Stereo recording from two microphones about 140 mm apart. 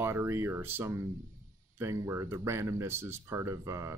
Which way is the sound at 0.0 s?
15° right (ahead or behind).